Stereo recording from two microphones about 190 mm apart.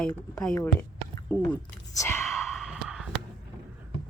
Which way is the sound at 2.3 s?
Centre (ahead or behind).